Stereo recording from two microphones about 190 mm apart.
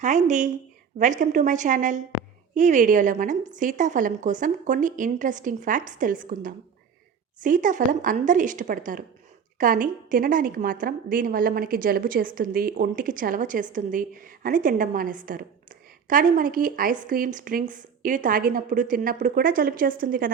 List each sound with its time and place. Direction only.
0.0 s a woman's voice: 40° right (ahead or behind)